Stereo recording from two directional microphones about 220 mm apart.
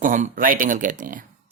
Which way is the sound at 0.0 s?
35° right (ahead or behind).